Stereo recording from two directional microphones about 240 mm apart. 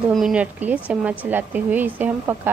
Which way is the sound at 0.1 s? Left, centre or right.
Centre.